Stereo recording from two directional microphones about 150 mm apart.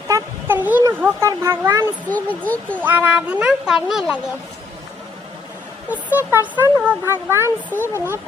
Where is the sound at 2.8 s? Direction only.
10° right (ahead or behind).